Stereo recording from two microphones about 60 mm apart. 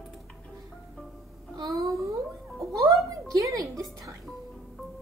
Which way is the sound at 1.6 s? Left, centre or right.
Right.